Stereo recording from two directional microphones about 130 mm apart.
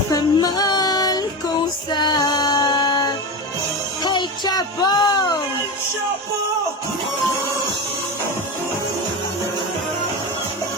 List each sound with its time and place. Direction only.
0.1 s female singing: 30° left (ahead or behind)
4.0 s music: 35° left (ahead or behind)